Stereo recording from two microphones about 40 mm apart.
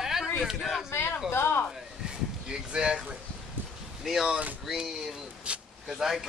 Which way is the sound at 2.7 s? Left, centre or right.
Right.